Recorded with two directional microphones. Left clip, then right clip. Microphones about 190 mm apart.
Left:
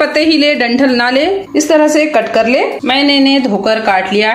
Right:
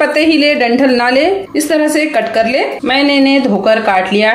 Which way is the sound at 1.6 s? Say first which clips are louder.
Left 5 dB; 20° left (ahead or behind).